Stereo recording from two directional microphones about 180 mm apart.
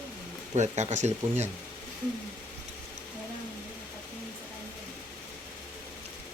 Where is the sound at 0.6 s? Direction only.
40° right (ahead or behind).